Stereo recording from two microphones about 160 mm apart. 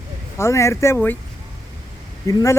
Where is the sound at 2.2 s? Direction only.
20° left (ahead or behind).